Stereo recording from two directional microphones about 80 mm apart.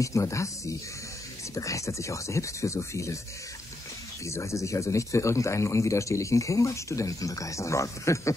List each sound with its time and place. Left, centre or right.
0.0 s speech: left
4.3 s speech: left